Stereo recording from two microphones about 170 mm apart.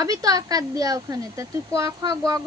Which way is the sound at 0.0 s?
20° right (ahead or behind).